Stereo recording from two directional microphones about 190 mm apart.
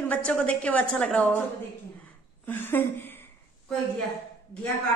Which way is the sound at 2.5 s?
10° left (ahead or behind).